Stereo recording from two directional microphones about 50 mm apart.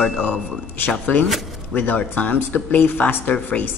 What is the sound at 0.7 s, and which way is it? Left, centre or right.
Speech, left.